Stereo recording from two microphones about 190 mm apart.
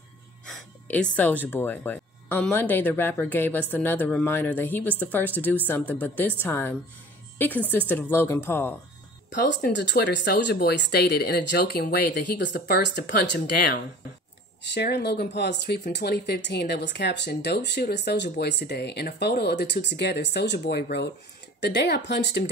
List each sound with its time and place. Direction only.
0.5 s a woman's voice: 5° left (ahead or behind)
9.3 s speech: 65° left (ahead or behind)